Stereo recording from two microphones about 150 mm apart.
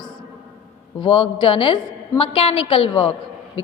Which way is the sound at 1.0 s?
35° left (ahead or behind).